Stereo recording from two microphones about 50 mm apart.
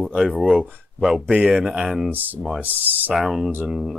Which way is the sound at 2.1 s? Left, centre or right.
Right.